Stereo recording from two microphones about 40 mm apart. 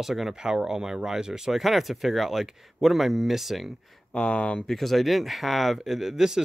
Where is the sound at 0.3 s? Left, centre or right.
Centre.